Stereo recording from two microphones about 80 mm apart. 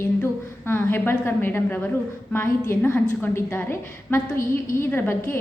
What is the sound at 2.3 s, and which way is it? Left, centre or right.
A woman's voice, left.